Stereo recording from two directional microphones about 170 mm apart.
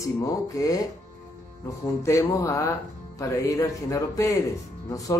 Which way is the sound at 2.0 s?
15° left (ahead or behind).